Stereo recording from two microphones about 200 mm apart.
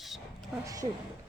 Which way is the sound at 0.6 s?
15° right (ahead or behind).